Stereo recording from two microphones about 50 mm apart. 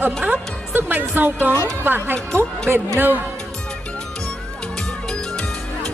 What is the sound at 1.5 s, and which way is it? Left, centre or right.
Speech, right.